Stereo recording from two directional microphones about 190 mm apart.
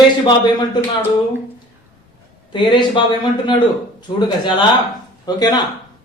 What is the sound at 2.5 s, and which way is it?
Speech, 25° left (ahead or behind).